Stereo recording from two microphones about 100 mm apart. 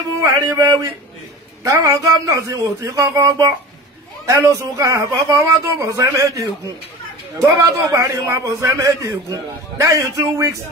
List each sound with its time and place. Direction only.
0.2 s a man's voice: 30° right (ahead or behind)
7.6 s a man's voice: 30° right (ahead or behind)